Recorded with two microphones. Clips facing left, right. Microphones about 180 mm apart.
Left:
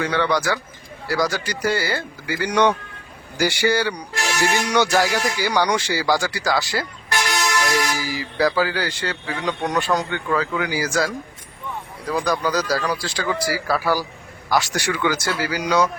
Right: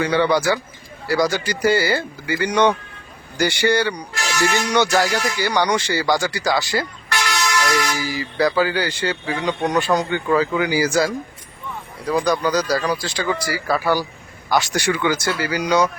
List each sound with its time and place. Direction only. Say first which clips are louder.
0.0 s speech: right 3 dB; 5° right (ahead or behind)
7.1 s vehicle: even; 50° left (ahead or behind)
7.9 s speech: right 1 dB; 5° left (ahead or behind)